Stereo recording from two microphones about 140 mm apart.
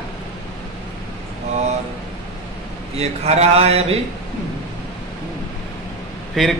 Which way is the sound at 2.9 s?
50° right (ahead or behind).